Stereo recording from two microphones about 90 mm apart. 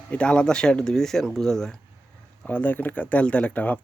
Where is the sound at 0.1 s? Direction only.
10° left (ahead or behind).